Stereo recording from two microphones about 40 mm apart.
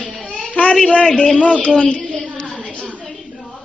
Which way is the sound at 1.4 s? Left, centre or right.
Left.